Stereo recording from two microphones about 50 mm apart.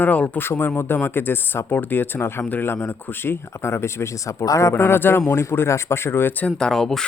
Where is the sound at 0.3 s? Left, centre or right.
Left.